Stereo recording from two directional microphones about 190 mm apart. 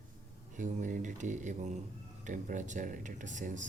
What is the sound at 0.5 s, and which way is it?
Speech, 45° right (ahead or behind).